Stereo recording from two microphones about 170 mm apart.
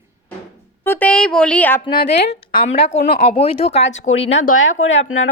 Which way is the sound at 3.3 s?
35° left (ahead or behind).